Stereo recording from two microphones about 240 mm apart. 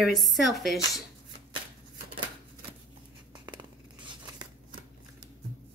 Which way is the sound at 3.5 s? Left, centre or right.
Centre.